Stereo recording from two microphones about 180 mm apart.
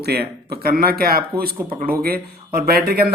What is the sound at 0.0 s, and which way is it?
Speech, 60° right (ahead or behind).